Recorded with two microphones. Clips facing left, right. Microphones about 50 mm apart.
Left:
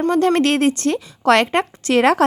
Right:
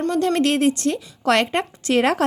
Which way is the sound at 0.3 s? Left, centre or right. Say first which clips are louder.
Left 2 dB; left.